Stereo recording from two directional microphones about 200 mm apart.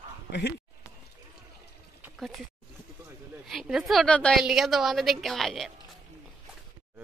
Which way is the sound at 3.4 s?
Centre (ahead or behind).